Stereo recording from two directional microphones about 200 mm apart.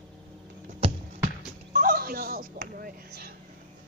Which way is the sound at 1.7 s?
45° right (ahead or behind).